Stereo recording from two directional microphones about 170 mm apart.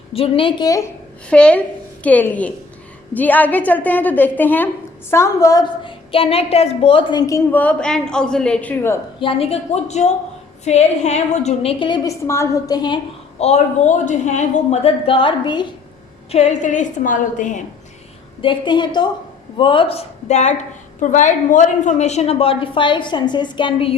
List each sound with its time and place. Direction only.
0.1 s a woman's voice: 35° left (ahead or behind)
1.3 s a woman's voice: 5° left (ahead or behind)
9.2 s a woman's voice: 35° left (ahead or behind)
13.4 s a woman's voice: 40° left (ahead or behind)
16.3 s a woman's voice: 40° left (ahead or behind)
18.4 s a woman's voice: 30° left (ahead or behind)